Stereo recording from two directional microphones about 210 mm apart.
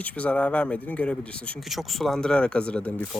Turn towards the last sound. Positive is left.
turn(degrees=5)  # may be behind; listen again after turning